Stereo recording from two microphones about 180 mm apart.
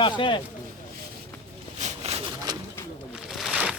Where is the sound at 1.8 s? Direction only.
40° right (ahead or behind).